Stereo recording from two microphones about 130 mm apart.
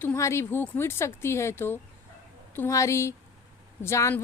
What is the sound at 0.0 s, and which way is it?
A woman's voice, 20° left (ahead or behind).